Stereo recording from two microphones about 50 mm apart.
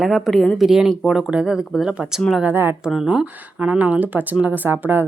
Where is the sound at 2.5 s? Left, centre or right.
Right.